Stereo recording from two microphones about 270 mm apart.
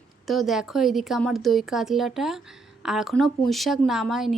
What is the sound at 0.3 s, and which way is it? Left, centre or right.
A woman's voice, centre.